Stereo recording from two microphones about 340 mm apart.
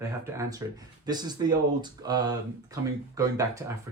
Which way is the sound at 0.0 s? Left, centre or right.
Centre.